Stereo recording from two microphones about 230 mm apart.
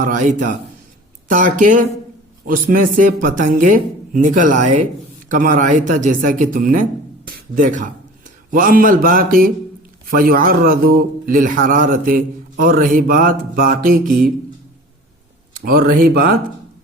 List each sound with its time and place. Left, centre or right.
0.0 s speech: right
15.5 s speech: right